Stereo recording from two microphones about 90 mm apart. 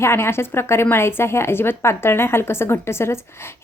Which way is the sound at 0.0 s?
30° left (ahead or behind).